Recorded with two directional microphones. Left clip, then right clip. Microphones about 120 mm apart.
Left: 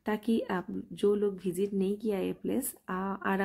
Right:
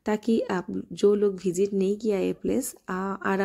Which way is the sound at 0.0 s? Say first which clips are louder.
Right 6 dB; 30° right (ahead or behind).